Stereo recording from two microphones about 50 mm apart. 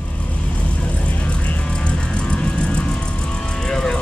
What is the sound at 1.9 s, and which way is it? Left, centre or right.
Vehicle, left.